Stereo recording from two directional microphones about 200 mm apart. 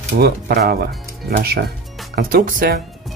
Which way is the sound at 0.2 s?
50° right (ahead or behind).